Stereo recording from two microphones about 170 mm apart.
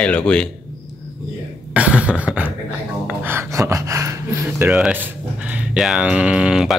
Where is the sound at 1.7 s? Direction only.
5° right (ahead or behind).